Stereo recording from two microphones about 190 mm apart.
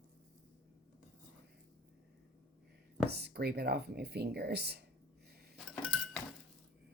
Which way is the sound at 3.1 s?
60° right (ahead or behind).